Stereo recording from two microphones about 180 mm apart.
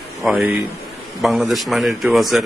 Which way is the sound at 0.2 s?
5° right (ahead or behind).